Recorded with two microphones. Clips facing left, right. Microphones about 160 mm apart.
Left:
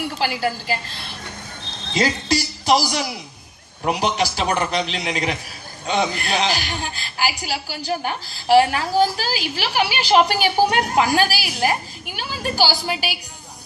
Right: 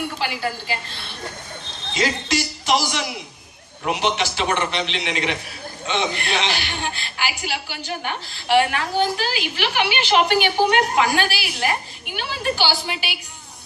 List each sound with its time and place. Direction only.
2.0 s a woman's voice: 35° left (ahead or behind)